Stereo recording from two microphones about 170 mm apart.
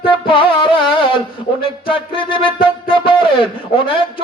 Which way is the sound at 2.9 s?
30° left (ahead or behind).